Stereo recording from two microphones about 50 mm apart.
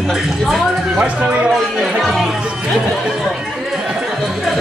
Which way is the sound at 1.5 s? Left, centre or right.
Centre.